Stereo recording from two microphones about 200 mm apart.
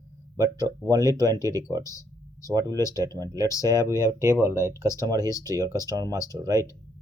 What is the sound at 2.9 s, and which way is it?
Speech, 20° right (ahead or behind).